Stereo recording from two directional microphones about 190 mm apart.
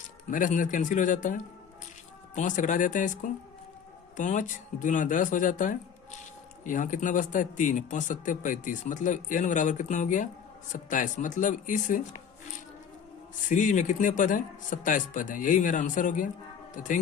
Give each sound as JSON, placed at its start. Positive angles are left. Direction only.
{"t": 0.3, "sound": "speech", "side_deg": 45}
{"t": 13.5, "sound": "speech", "side_deg": 40}